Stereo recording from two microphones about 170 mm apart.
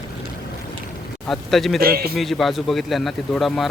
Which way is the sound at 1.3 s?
Centre (ahead or behind).